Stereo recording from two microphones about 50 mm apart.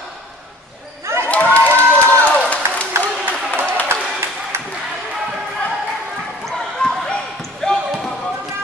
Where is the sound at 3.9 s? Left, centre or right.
Right.